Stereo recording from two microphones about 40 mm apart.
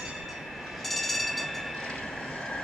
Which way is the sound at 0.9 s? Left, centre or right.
Centre.